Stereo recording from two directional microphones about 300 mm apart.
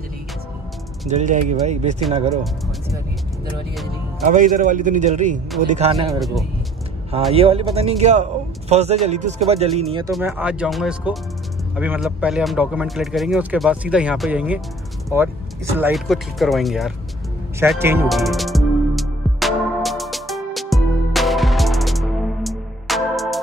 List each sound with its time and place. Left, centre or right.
1.0 s a man's voice: right
4.2 s a man's voice: right
6.1 s speech: centre
7.3 s a man's voice: centre
10.1 s speech: centre
17.6 s music: centre